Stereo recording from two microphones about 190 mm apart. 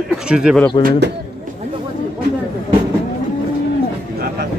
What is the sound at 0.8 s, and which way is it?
Speech, 65° right (ahead or behind).